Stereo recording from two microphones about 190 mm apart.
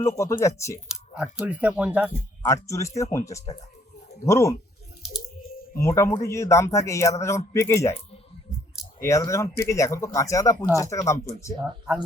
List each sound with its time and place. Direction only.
0.0 s speech: 15° left (ahead or behind)
1.1 s speech: 5° right (ahead or behind)
2.4 s speech: 15° left (ahead or behind)
5.7 s speech: 15° left (ahead or behind)
9.0 s speech: 15° left (ahead or behind)